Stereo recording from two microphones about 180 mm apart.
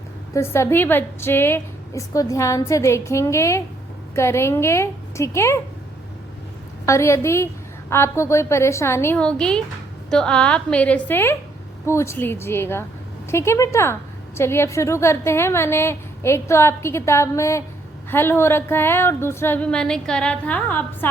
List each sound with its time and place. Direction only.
0.3 s a woman's voice: 15° left (ahead or behind)
6.8 s a woman's voice: 15° left (ahead or behind)